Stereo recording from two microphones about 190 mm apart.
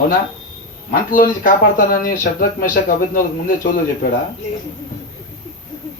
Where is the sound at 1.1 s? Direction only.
45° left (ahead or behind).